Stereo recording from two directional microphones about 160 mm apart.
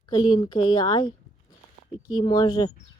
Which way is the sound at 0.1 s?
30° left (ahead or behind).